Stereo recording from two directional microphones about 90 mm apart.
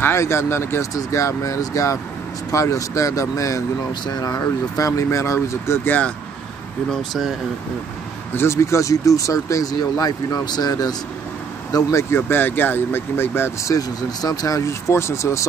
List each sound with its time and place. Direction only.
0.0 s speech: 30° left (ahead or behind)
5.9 s speech: 15° left (ahead or behind)
6.9 s speech: centre (ahead or behind)
8.4 s speech: 30° left (ahead or behind)
11.7 s speech: 30° left (ahead or behind)
13.7 s speech: 45° left (ahead or behind)